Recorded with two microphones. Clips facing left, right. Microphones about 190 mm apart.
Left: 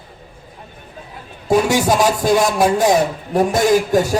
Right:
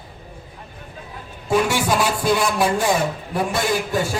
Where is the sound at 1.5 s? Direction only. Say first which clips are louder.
Left 4 dB; 40° left (ahead or behind).